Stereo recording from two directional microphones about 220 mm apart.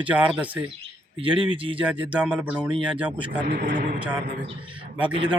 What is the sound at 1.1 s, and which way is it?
Speech, 25° right (ahead or behind).